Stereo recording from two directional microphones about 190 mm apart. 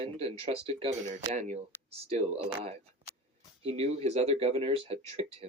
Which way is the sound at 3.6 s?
35° right (ahead or behind).